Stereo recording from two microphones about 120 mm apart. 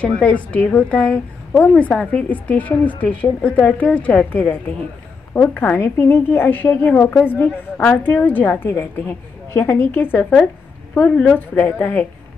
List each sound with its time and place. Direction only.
0.0 s a woman's voice: 10° left (ahead or behind)